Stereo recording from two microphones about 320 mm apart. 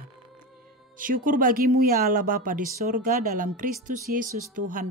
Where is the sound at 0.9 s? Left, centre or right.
Right.